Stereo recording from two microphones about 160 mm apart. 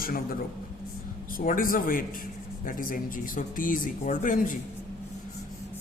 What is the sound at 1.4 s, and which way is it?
A man's voice, 60° left (ahead or behind).